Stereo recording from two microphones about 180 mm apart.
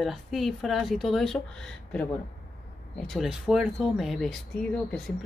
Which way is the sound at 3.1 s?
Centre (ahead or behind).